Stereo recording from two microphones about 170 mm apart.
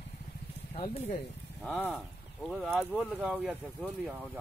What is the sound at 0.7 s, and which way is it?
Speech, 40° left (ahead or behind).